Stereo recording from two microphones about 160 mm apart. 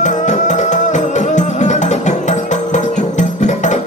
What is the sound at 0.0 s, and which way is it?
Music, 50° left (ahead or behind).